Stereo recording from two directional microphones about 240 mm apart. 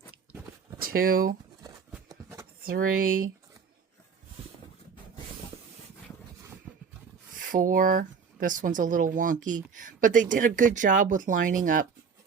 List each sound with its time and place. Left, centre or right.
0.8 s speech: right
2.0 s a sound: centre
2.6 s speech: right
7.4 s speech: right